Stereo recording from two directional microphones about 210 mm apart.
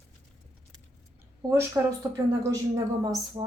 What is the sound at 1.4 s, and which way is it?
A woman's voice, 15° right (ahead or behind).